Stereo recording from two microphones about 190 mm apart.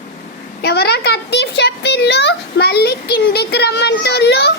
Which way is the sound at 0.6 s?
60° left (ahead or behind).